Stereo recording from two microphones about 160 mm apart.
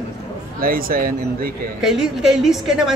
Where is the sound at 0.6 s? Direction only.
65° right (ahead or behind).